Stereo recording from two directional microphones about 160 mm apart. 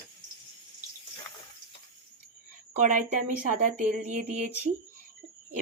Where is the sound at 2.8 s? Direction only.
50° right (ahead or behind).